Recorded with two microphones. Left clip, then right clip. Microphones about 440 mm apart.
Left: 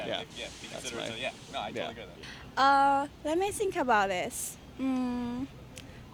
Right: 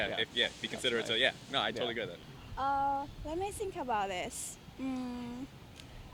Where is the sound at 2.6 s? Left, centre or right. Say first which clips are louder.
Left 9 dB; left.